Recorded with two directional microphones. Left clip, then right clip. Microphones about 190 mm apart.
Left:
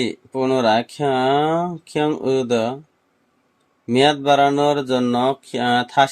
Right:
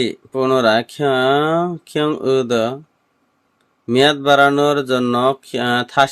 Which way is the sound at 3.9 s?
20° right (ahead or behind).